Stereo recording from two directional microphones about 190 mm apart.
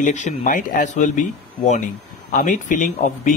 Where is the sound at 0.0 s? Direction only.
40° left (ahead or behind).